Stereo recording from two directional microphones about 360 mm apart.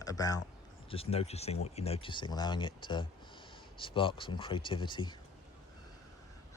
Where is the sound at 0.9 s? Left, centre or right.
Centre.